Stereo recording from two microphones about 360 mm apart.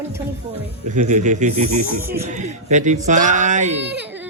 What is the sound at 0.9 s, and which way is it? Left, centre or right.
Speech, centre.